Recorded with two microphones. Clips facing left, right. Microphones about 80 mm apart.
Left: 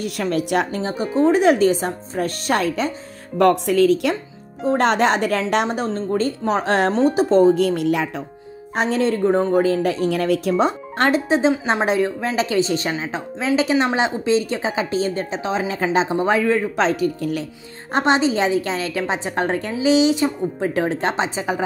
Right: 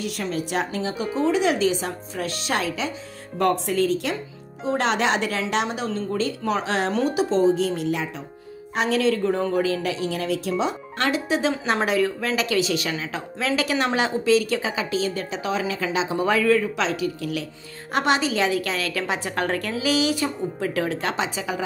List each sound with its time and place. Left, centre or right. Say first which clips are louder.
0.0 s speech: left 5 dB; left
0.7 s speech: left 5 dB; left
3.3 s speech: left 6 dB; left
4.6 s a woman's voice: left 5 dB; left
6.9 s speech: left 5 dB; left
8.7 s a woman's voice: left 2 dB; left
16.7 s a woman's voice: left 5 dB; left
17.9 s speech: left 4 dB; left